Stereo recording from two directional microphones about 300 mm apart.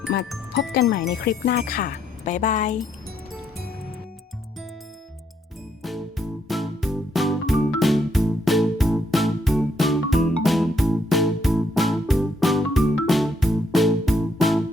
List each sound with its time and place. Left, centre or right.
0.1 s speech: left
5.8 s music: centre